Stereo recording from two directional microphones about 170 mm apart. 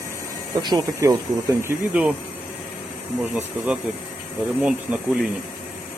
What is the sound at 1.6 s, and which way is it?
Speech, 10° right (ahead or behind).